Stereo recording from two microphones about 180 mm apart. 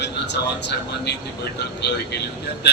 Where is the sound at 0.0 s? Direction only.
70° left (ahead or behind).